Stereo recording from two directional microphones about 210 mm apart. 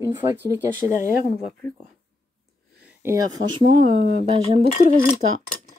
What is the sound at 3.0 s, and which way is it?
Speech, 15° right (ahead or behind).